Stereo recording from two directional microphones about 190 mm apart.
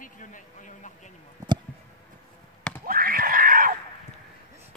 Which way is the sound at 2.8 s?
50° right (ahead or behind).